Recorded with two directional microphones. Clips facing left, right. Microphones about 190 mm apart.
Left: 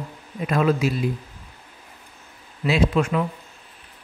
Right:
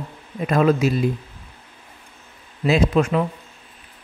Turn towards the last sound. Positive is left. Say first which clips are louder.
# right 2 dB
turn(degrees=-40)  # may be behind; listen again after turning